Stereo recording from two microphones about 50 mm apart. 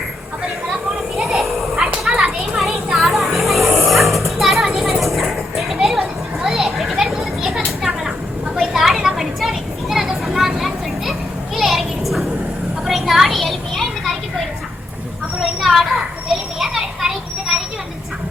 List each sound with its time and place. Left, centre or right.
1.1 s children playing: centre; by 2.6 s right
2.6 s dog: centre
5.8 s a sound: centre
11.5 s children playing: centre
12.8 s a sound: centre
16.6 s children playing: centre